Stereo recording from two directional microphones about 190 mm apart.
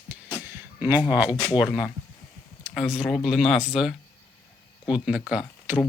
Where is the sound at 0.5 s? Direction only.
10° right (ahead or behind).